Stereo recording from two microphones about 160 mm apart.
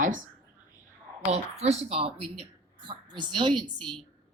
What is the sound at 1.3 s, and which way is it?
A woman's voice, 45° right (ahead or behind).